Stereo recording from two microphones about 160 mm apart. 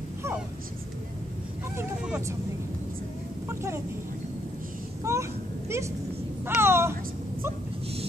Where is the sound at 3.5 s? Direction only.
15° right (ahead or behind).